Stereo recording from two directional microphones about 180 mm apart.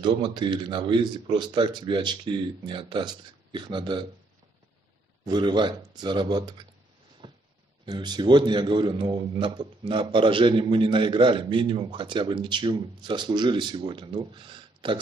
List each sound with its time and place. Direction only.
0.0 s a man's voice: 25° right (ahead or behind)
5.2 s a man's voice: 25° right (ahead or behind)
7.2 s a sound: 25° right (ahead or behind)
7.8 s a man's voice: 25° right (ahead or behind)